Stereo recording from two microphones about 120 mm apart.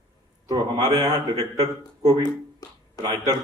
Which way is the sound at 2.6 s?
30° left (ahead or behind).